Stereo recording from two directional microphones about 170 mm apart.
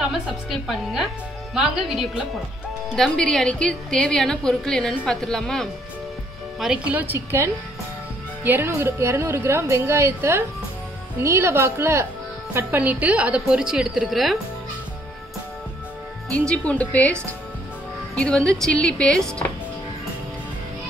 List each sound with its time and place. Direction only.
0.0 s a woman's voice: centre (ahead or behind)
16.3 s speech: 5° left (ahead or behind)